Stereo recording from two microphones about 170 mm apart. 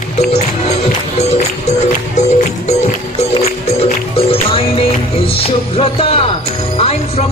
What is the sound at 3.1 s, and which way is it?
Music, 35° left (ahead or behind).